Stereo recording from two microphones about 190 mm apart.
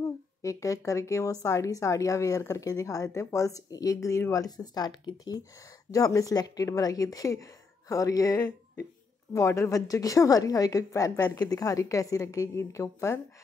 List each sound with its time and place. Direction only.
0.4 s a woman's voice: 15° left (ahead or behind)